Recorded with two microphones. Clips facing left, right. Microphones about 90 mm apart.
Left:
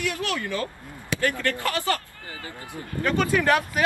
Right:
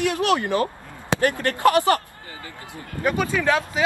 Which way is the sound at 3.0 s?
15° right (ahead or behind).